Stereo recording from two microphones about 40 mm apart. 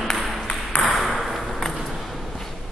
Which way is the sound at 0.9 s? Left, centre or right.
Centre.